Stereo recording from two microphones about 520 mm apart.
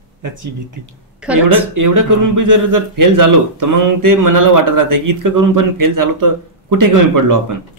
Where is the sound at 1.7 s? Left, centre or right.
Right.